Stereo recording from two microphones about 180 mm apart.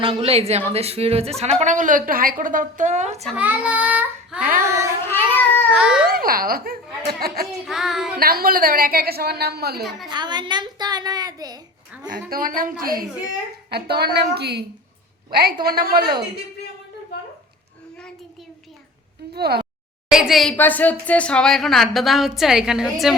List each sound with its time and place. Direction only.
0.0 s a woman's voice: 30° right (ahead or behind)
3.3 s child singing: 10° right (ahead or behind)
5.0 s baby cry: 10° left (ahead or behind)
5.7 s baby cry: 5° right (ahead or behind)
6.1 s chuckle: 55° right (ahead or behind)
7.7 s a woman's voice: centre (ahead or behind)
8.2 s a woman's voice: 55° right (ahead or behind)
10.1 s a woman's voice: 25° right (ahead or behind)
12.3 s a woman's voice: 50° right (ahead or behind)
13.7 s a woman's voice: 65° right (ahead or behind)
19.3 s a woman's voice: 60° right (ahead or behind)
20.1 s a woman's voice: 5° right (ahead or behind)
20.6 s a woman's voice: 10° left (ahead or behind)